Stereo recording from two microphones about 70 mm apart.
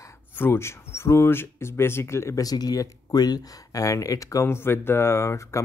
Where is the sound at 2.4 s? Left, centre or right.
Left.